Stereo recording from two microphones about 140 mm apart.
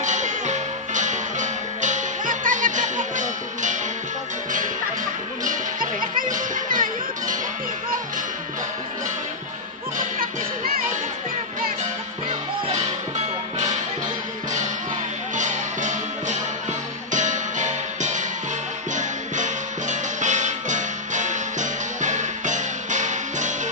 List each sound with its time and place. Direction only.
0.0 s music: 60° right (ahead or behind)
5.4 s music: 70° right (ahead or behind)
9.9 s music: 85° right
15.3 s music: 60° right (ahead or behind)